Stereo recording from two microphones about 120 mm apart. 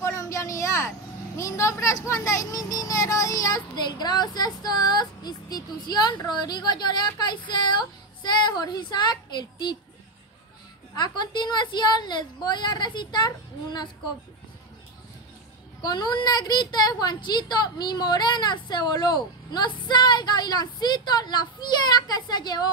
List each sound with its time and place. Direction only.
0.0 s vehicle: 25° left (ahead or behind)
2.0 s speech: 25° left (ahead or behind)
11.0 s speech: 35° left (ahead or behind)
15.8 s speech: 40° left (ahead or behind)